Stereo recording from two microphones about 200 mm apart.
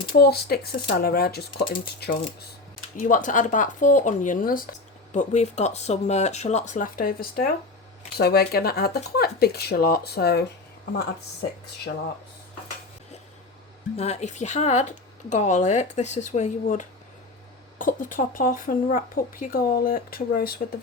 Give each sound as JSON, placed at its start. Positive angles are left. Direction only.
{"t": 0.1, "sound": "speech", "side_deg": 50}
{"t": 13.9, "sound": "speech", "side_deg": 30}